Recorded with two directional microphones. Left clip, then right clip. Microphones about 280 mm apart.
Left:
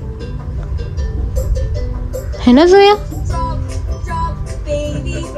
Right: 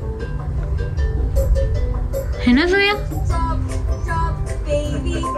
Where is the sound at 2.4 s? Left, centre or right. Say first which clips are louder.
Left 9 dB; centre.